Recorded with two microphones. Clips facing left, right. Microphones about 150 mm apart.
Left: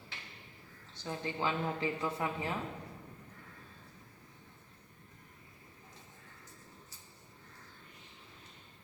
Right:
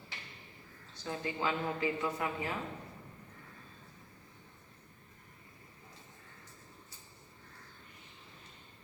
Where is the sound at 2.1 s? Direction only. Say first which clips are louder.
Even; 25° left (ahead or behind).